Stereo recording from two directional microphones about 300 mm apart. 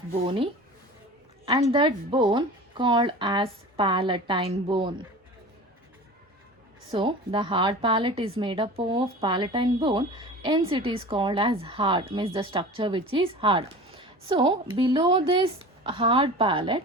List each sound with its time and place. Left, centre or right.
0.1 s speech: centre
1.7 s speech: centre
6.9 s speech: centre